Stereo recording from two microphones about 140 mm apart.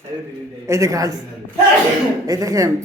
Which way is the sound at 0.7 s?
20° right (ahead or behind).